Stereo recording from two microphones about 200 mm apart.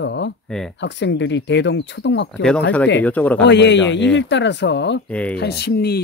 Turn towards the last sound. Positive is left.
turn(degrees=50)  # may be behind; listen again after turning